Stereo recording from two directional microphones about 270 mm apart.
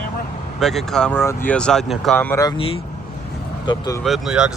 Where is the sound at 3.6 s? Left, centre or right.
Centre.